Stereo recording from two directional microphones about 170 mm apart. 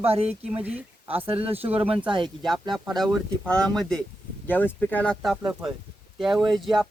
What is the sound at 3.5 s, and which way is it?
Speech, 5° left (ahead or behind).